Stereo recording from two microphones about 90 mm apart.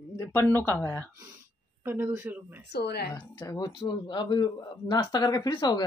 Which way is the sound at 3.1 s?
45° left (ahead or behind).